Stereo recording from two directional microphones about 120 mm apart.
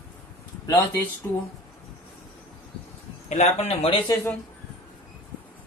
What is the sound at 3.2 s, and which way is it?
Speech, 70° left (ahead or behind).